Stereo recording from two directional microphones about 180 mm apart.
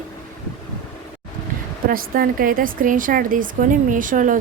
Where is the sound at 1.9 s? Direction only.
50° right (ahead or behind).